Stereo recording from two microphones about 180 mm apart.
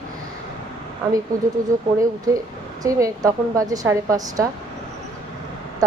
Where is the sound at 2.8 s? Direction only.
20° right (ahead or behind).